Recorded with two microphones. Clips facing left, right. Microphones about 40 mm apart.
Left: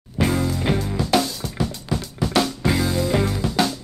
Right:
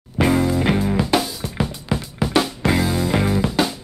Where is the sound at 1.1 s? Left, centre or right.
Centre.